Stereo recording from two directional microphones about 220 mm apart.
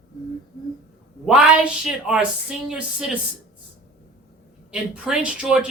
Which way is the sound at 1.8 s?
5° right (ahead or behind).